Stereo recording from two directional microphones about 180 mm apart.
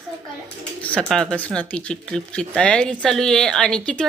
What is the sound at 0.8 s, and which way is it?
Speech, 5° left (ahead or behind).